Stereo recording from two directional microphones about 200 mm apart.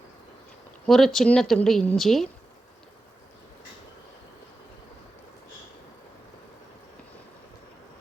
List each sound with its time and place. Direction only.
0.9 s speech: centre (ahead or behind)